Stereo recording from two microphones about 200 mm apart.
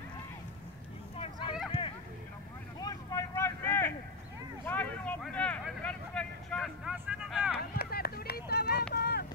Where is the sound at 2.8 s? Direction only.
15° left (ahead or behind); by 7.5 s 5° right (ahead or behind).